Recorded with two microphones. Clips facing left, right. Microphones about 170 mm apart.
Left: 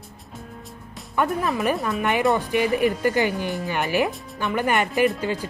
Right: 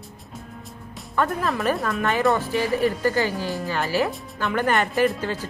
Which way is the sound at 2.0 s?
15° left (ahead or behind).